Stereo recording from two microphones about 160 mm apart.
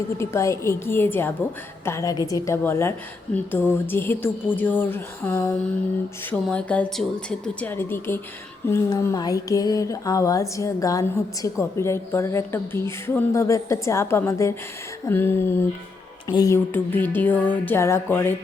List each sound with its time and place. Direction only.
0.2 s a woman's voice: 15° left (ahead or behind)
8.6 s a sound: 20° left (ahead or behind)
11.4 s a woman's voice: 20° left (ahead or behind)
16.7 s a woman's voice: 10° left (ahead or behind)